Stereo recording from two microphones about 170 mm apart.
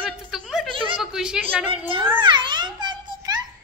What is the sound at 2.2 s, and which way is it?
A child's voice, 25° right (ahead or behind).